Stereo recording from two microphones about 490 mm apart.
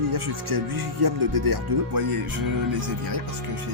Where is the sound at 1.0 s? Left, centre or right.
Right.